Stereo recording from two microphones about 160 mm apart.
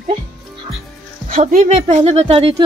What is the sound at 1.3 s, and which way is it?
A woman's voice, 55° right (ahead or behind).